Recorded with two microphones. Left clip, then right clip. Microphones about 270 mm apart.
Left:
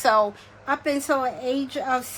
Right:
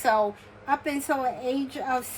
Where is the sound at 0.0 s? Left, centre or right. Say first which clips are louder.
Left 4 dB; centre.